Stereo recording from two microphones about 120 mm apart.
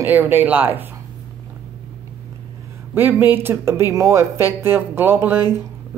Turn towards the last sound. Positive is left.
turn(degrees=-20)  # may be behind; listen again after turning